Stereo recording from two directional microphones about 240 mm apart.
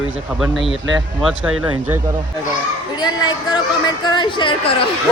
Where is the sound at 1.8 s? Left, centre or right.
Centre.